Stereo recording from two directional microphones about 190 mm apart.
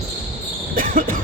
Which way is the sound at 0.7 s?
45° right (ahead or behind).